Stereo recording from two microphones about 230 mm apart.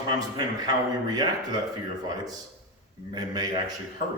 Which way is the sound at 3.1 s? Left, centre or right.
Centre.